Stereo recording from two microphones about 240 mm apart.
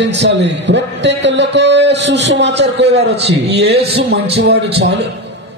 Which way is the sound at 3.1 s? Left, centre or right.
Right.